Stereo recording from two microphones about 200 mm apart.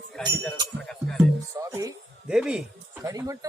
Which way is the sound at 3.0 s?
15° right (ahead or behind).